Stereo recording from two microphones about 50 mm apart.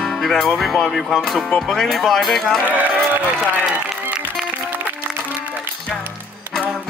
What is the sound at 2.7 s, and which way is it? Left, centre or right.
Speech, right.